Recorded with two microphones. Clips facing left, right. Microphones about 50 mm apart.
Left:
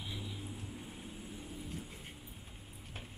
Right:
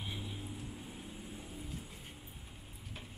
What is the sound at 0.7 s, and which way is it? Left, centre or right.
Vehicle, centre.